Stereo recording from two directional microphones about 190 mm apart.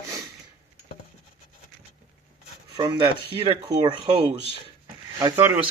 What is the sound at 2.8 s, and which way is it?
Speech, 25° right (ahead or behind).